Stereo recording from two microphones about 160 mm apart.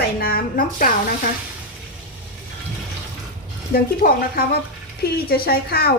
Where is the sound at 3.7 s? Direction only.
65° left (ahead or behind).